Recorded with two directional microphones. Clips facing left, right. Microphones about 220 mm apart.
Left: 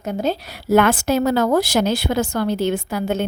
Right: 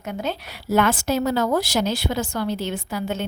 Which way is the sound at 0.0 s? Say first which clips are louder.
Left 6 dB; 40° left (ahead or behind).